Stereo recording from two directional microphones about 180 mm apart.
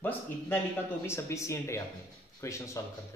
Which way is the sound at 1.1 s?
15° left (ahead or behind).